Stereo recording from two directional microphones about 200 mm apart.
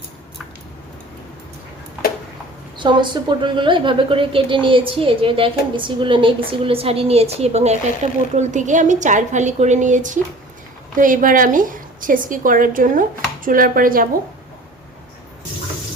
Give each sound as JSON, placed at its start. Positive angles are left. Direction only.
{"t": 2.7, "sound": "a woman's voice", "side_deg": -25}